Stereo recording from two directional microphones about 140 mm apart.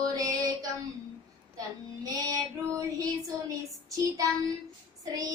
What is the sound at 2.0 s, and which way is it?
Child singing, 25° right (ahead or behind).